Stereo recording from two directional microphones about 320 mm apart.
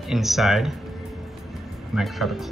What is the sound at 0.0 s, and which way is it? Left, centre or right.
Speech, centre.